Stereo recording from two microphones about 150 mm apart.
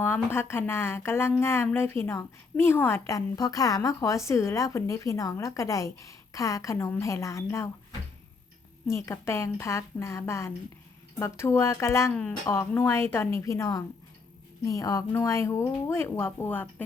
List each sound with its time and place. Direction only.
0.0 s speech: 15° left (ahead or behind)
8.9 s speech: 15° left (ahead or behind)